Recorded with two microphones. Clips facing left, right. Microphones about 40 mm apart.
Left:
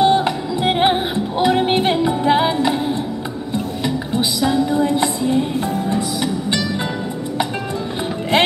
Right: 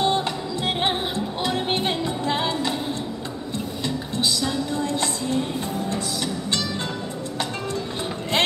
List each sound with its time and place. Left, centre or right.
0.0 s music: centre
3.8 s music: centre